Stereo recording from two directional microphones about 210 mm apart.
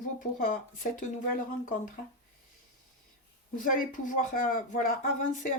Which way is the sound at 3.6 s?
40° left (ahead or behind).